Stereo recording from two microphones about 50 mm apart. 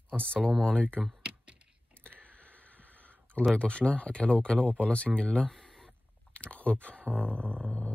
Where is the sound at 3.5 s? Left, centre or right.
Left.